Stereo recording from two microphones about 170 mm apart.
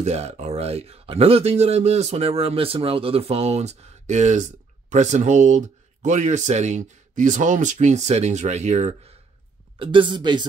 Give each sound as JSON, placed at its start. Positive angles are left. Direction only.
{"t": 0.0, "sound": "speech", "side_deg": -40}